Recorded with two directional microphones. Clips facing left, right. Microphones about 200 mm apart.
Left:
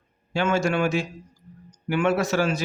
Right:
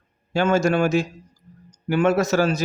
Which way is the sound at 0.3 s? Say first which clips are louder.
Right 4 dB; 40° right (ahead or behind).